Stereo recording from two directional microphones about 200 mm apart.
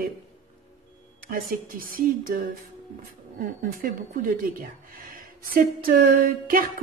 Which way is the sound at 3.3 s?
45° right (ahead or behind).